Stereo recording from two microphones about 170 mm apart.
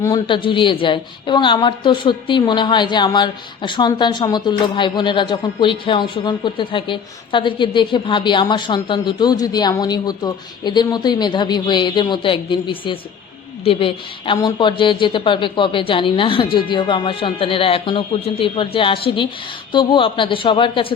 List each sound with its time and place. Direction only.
0.0 s a woman's voice: 25° left (ahead or behind)